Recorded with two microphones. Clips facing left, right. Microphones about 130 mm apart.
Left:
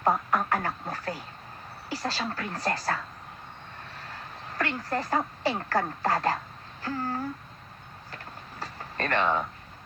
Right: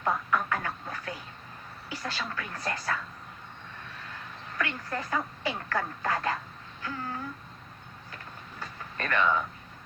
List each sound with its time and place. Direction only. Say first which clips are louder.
0.0 s speech: left 3 dB; 40° left (ahead or behind)
4.0 s speech: left 2 dB; 40° left (ahead or behind)
6.8 s a sound: left 5 dB; 40° left (ahead or behind)